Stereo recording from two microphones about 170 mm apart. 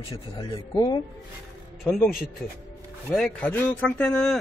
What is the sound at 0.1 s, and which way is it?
Speech, 25° left (ahead or behind).